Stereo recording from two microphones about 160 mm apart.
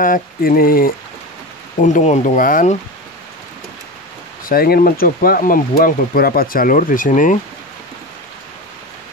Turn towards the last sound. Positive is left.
turn(degrees=55)  # may be behind; listen again after turning